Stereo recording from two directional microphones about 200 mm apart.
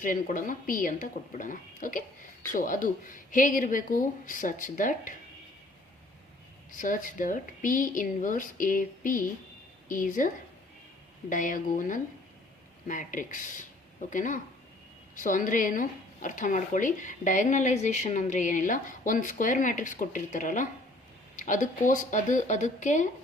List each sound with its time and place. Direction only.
0.0 s a woman's voice: 40° left (ahead or behind)
6.7 s a woman's voice: 40° left (ahead or behind)